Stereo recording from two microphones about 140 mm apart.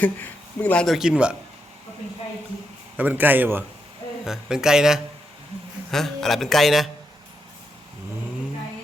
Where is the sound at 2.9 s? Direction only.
10° right (ahead or behind).